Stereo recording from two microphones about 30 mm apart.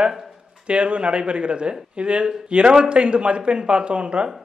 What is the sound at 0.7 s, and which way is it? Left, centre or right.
Speech, right.